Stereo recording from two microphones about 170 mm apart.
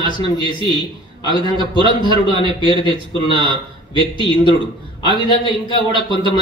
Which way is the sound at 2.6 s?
25° left (ahead or behind).